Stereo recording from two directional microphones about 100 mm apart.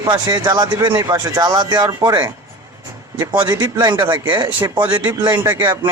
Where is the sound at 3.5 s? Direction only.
40° right (ahead or behind).